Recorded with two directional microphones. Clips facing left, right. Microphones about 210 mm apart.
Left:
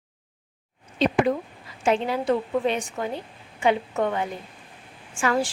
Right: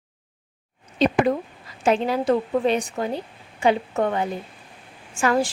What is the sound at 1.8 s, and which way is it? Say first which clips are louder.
A woman's voice: right 2 dB; 40° right (ahead or behind).